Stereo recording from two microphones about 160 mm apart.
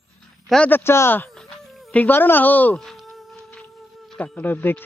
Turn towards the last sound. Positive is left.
turn(degrees=15)  # may be behind; listen again after turning